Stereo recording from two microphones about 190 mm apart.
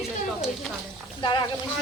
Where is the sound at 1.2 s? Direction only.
25° left (ahead or behind).